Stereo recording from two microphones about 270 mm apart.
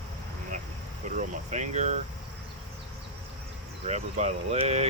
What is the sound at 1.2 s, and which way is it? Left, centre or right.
Air conditioning, right.